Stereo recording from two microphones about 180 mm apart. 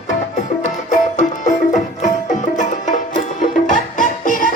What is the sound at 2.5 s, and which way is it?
Music, 45° left (ahead or behind).